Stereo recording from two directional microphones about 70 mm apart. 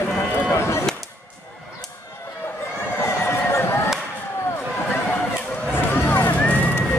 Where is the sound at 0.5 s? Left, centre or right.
Left.